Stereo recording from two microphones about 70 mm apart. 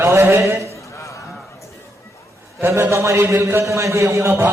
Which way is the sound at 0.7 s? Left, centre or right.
Left.